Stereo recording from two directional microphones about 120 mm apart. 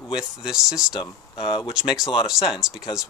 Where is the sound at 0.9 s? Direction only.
45° left (ahead or behind).